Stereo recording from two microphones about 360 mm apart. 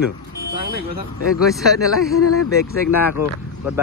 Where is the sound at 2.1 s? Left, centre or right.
Left.